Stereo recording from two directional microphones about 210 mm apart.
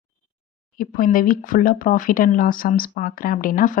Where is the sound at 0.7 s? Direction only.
40° left (ahead or behind).